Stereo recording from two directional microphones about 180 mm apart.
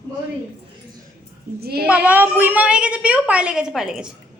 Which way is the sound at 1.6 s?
60° right (ahead or behind).